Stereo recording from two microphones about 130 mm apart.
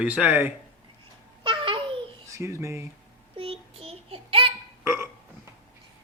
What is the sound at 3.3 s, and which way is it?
Child singing, 45° right (ahead or behind).